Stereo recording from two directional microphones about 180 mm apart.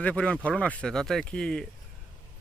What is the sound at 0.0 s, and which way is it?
Speech, 5° left (ahead or behind).